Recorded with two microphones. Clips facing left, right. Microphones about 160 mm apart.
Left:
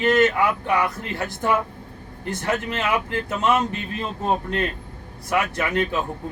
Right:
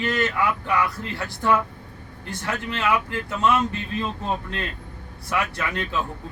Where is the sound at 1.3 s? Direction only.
20° left (ahead or behind).